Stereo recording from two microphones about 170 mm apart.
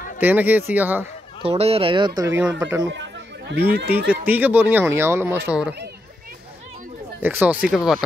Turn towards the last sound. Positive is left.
turn(degrees=-5)  # may be behind; listen again after turning